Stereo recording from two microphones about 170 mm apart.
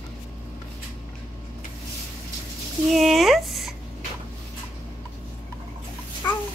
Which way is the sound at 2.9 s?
Centre (ahead or behind).